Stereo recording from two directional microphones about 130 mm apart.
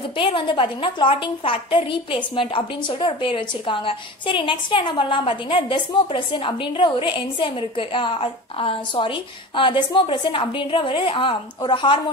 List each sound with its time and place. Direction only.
0.2 s a woman's voice: 40° left (ahead or behind)